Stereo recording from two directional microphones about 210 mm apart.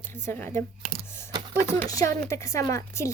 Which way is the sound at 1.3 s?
20° right (ahead or behind).